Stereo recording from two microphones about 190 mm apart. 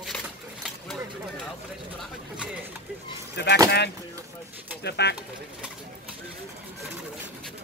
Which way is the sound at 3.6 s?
60° left (ahead or behind).